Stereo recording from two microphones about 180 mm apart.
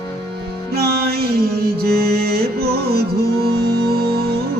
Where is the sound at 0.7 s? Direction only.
60° right (ahead or behind).